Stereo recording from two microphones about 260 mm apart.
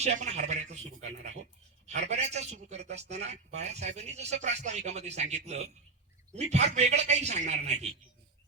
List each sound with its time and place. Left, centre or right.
0.0 s a man's voice: right
1.9 s a man's voice: right